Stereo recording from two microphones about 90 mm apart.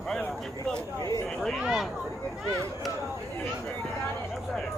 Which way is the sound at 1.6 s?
10° right (ahead or behind).